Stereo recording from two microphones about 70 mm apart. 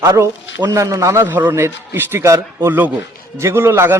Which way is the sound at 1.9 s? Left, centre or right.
Right.